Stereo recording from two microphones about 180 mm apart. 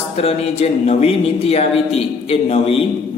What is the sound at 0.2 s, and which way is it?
A man's voice, 35° left (ahead or behind).